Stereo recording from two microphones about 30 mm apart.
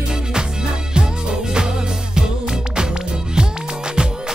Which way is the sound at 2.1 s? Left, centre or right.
Right.